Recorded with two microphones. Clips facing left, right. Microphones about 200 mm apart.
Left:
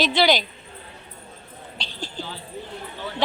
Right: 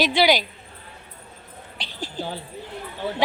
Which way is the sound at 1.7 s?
20° left (ahead or behind).